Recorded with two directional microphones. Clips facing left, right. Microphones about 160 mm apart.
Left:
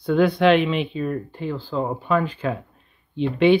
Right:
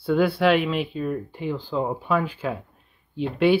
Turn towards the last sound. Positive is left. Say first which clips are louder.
# left 3 dB
turn(degrees=-5)  # may be behind; listen again after turning